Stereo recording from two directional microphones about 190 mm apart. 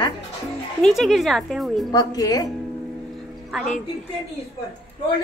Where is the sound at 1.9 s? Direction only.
20° left (ahead or behind).